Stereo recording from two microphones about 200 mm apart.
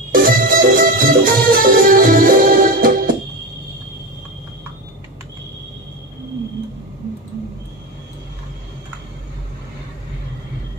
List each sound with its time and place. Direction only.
0.1 s music: 45° right (ahead or behind)